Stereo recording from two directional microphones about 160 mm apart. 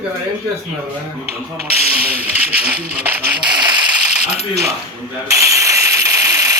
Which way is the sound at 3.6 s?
30° right (ahead or behind).